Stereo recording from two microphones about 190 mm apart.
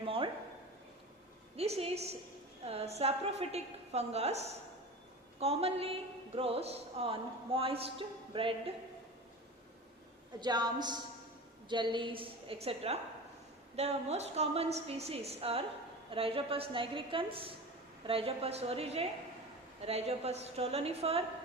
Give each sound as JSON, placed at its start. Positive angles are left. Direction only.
{"t": 0.0, "sound": "a sound", "side_deg": -30}
{"t": 1.5, "sound": "a woman's voice", "side_deg": -35}
{"t": 10.4, "sound": "a woman's voice", "side_deg": -20}